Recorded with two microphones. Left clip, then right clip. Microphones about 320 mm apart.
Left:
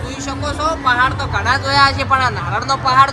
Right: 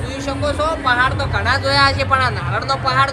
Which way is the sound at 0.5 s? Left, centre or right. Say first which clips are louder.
Left 2 dB; centre.